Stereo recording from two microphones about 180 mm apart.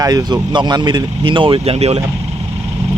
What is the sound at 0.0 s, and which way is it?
Speech, 20° right (ahead or behind).